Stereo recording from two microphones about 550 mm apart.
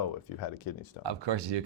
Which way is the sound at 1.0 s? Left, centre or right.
Right.